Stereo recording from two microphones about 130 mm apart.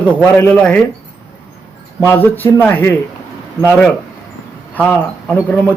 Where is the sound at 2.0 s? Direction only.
20° left (ahead or behind).